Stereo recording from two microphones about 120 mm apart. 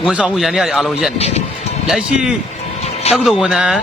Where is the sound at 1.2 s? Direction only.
60° left (ahead or behind).